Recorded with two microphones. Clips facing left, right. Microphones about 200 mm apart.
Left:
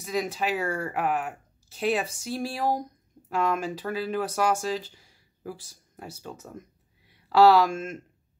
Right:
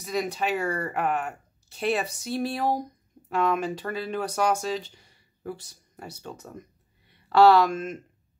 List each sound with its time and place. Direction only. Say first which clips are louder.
0.0 s speech: even; centre (ahead or behind)